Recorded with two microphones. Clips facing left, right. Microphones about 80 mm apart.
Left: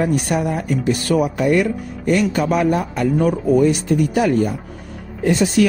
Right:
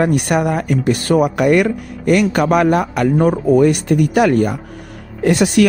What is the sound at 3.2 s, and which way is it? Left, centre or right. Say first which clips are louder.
Speech: right 3 dB; right.